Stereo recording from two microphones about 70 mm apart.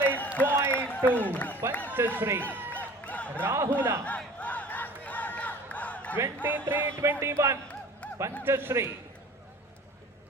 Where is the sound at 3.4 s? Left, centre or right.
Right.